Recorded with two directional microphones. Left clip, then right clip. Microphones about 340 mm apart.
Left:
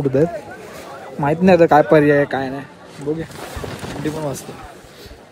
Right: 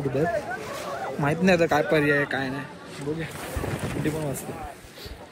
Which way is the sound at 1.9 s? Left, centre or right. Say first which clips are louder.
Left 9 dB; left.